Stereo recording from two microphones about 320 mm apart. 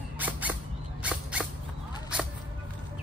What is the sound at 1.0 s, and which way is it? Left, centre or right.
Dog, centre.